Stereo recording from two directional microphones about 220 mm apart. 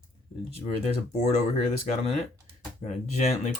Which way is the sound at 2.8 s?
30° left (ahead or behind).